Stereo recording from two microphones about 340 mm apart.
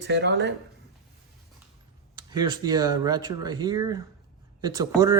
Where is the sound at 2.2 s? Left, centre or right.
Centre.